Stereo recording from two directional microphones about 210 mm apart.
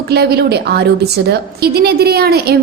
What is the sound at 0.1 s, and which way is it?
A woman's voice, 50° right (ahead or behind).